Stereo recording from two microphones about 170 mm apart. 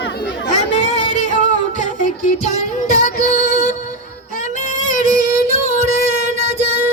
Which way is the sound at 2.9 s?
50° left (ahead or behind).